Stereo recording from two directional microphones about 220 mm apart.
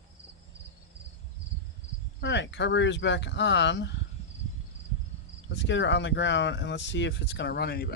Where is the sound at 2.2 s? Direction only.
55° left (ahead or behind).